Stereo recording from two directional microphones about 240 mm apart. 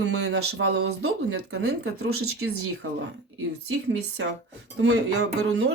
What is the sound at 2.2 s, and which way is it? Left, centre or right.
Speech, right.